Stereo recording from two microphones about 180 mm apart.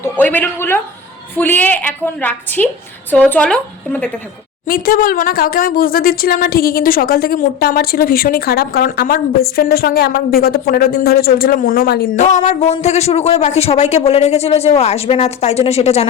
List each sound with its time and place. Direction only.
0.0 s a woman's voice: 10° left (ahead or behind)
4.6 s speech: 50° left (ahead or behind)
12.1 s a man's voice: 40° left (ahead or behind)